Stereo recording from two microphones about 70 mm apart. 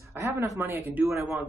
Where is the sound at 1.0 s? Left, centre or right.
Right.